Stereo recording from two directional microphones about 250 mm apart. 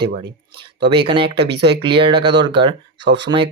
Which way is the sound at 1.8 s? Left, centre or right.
Centre.